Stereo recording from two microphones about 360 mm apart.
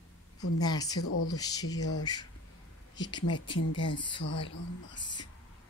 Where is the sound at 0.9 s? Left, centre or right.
Left.